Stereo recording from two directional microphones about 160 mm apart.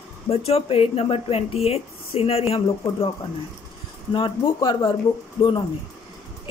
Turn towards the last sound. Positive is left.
turn(degrees=30)  # may be behind; listen again after turning